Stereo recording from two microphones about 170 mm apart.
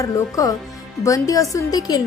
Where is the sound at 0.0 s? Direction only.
20° left (ahead or behind).